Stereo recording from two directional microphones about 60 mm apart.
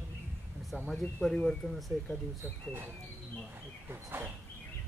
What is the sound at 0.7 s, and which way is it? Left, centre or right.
Speech, centre.